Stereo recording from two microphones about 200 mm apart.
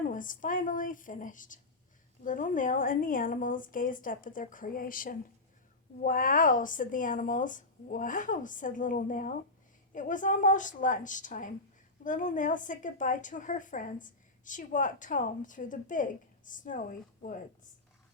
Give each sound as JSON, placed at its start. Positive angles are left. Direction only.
{"t": 0.1, "sound": "a woman's voice", "side_deg": 40}